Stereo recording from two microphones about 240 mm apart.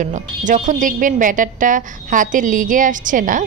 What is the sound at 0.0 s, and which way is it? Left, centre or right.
A woman's voice, right.